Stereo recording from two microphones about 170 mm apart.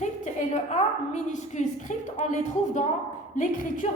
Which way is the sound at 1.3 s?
45° left (ahead or behind).